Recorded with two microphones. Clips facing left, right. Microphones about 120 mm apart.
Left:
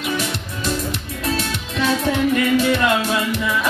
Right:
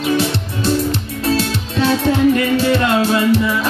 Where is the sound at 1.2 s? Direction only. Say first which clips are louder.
Right 6 dB; 30° right (ahead or behind).